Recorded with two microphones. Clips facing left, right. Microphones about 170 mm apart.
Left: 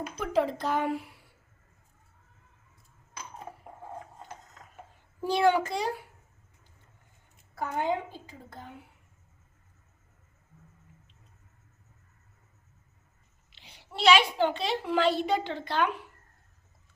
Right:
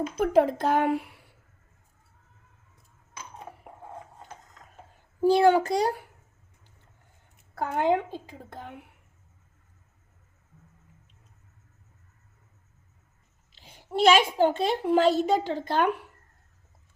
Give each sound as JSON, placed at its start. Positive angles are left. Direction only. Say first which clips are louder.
{"t": 0.2, "sound": "a woman's voice", "louder": "right 6 dB", "side_deg": -50}
{"t": 5.2, "sound": "a child's voice", "louder": "right 5 dB", "side_deg": -35}
{"t": 7.5, "sound": "a woman's voice", "louder": "right 5 dB", "side_deg": -60}
{"t": 13.6, "sound": "a woman's voice", "louder": "right 10 dB", "side_deg": -50}